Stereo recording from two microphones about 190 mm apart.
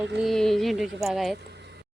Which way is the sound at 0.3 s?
Centre (ahead or behind).